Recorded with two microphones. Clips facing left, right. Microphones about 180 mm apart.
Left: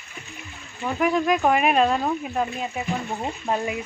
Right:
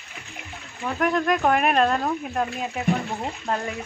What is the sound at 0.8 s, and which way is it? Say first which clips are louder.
Speech: left 1 dB; 5° left (ahead or behind).